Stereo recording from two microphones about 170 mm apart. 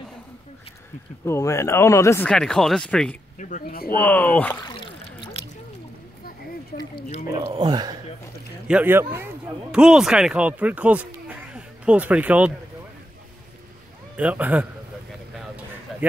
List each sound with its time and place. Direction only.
1.2 s speech: 20° left (ahead or behind)
2.2 s speech: 5° left (ahead or behind)
3.3 s speech: 50° left (ahead or behind)
4.0 s speech: 10° left (ahead or behind)
4.6 s a sound: 30° left (ahead or behind)
7.2 s speech: 25° right (ahead or behind)
8.6 s speech: 10° right (ahead or behind)
14.1 s speech: 10° right (ahead or behind)
15.3 s a sound: 10° right (ahead or behind)